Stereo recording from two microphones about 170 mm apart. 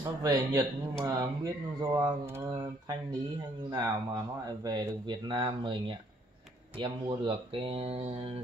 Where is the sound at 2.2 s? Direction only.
15° right (ahead or behind).